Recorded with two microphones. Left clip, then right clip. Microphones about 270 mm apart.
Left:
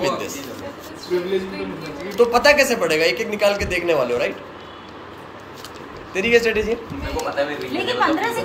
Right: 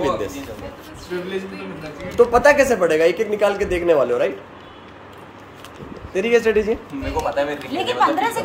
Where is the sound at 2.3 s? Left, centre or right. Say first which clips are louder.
Even; right.